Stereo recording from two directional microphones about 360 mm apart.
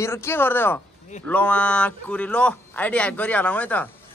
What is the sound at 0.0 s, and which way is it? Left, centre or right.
A man's voice, centre.